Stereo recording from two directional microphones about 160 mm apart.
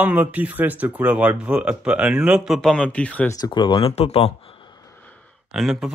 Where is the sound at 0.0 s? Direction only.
10° right (ahead or behind); by 3.3 s 10° left (ahead or behind).